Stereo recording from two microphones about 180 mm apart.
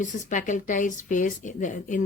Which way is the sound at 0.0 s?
45° left (ahead or behind).